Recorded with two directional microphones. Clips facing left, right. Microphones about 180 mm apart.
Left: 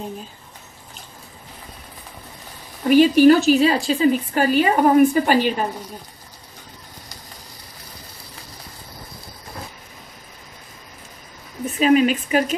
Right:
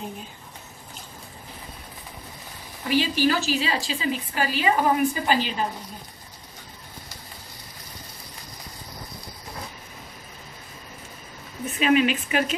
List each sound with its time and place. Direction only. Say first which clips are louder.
2.9 s a woman's voice: left 11 dB; 50° left (ahead or behind)
11.6 s speech: left 5 dB; 40° left (ahead or behind)